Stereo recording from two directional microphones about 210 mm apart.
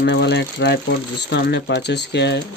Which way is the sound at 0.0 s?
55° left (ahead or behind).